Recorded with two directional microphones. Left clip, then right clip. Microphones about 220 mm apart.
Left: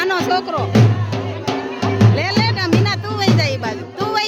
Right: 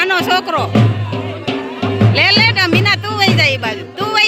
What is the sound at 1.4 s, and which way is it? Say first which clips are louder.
Drum: even; 30° left (ahead or behind).